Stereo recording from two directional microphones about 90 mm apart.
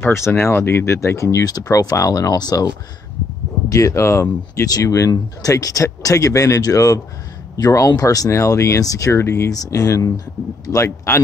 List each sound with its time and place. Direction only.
0.0 s speech: 30° left (ahead or behind); by 2.7 s 45° left (ahead or behind)
3.7 s speech: 35° left (ahead or behind)
4.6 s speech: 40° left (ahead or behind)
9.5 s speech: 40° left (ahead or behind)